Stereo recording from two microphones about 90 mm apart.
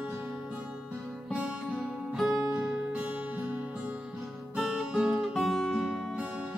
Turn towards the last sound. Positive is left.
turn(degrees=-15)  # may be behind; listen again after turning